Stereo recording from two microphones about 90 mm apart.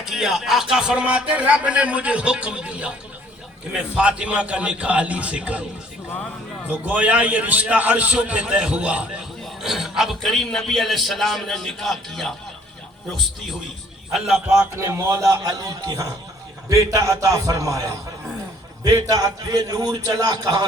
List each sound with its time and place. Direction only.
0.0 s speech: 5° right (ahead or behind)
6.7 s a man's voice: 15° right (ahead or behind); by 12.3 s centre (ahead or behind)
14.1 s a man's voice: 5° right (ahead or behind)
14.5 s a man's voice: 30° right (ahead or behind); by 20.7 s 50° right (ahead or behind)